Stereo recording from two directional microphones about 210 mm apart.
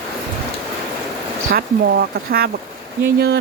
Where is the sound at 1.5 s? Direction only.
45° right (ahead or behind).